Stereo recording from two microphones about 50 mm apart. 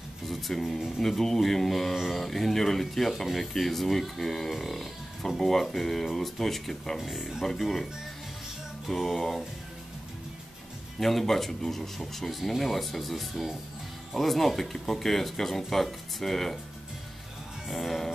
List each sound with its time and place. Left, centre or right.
0.3 s speech: centre
1.0 s speech: centre
11.0 s speech: centre
17.6 s speech: centre